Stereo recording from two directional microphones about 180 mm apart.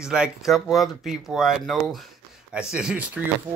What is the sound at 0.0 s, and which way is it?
Speech, 5° right (ahead or behind).